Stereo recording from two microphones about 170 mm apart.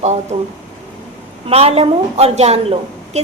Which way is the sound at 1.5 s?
35° right (ahead or behind).